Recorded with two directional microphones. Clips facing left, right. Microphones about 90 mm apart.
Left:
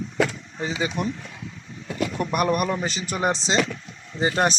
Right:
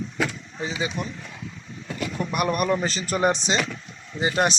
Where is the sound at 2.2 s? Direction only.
60° left (ahead or behind).